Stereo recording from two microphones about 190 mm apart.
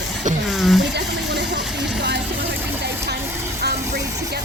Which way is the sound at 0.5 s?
Centre (ahead or behind).